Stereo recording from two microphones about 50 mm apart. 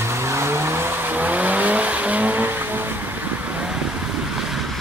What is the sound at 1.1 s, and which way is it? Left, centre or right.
Vehicle, right.